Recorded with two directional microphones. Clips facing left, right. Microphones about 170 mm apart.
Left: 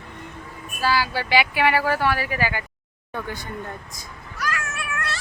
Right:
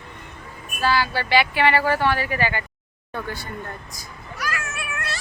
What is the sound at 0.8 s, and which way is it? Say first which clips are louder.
Speech: right 1 dB; 10° left (ahead or behind).